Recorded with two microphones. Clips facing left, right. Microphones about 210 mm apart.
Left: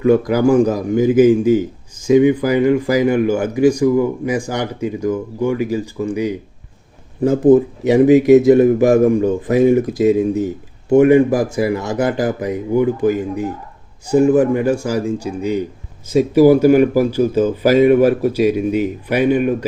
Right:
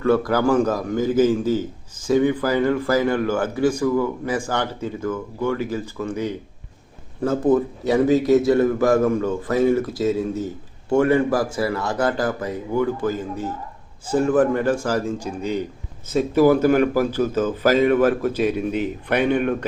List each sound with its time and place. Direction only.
0.0 s speech: 15° left (ahead or behind)
7.5 s speech: 20° left (ahead or behind)